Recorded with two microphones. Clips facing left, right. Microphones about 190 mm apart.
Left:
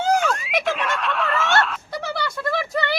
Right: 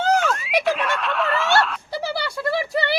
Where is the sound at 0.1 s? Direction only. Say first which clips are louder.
Right 1 dB; centre (ahead or behind).